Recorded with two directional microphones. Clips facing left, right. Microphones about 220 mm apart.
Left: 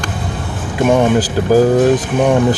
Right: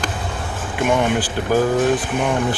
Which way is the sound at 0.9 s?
40° left (ahead or behind).